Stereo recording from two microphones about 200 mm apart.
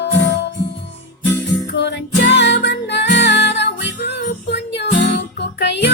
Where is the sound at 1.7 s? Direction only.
60° left (ahead or behind).